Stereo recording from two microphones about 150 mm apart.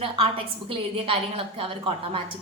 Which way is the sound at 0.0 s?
35° right (ahead or behind).